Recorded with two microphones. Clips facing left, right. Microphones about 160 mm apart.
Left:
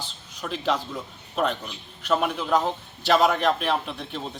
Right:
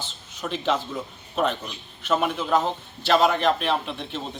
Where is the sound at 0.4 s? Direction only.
Centre (ahead or behind).